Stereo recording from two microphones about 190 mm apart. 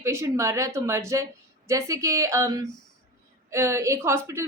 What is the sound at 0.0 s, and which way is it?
A woman's voice, 15° right (ahead or behind).